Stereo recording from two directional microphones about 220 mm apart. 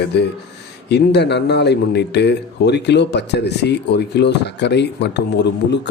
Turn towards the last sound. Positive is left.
turn(degrees=50)  # may be behind; listen again after turning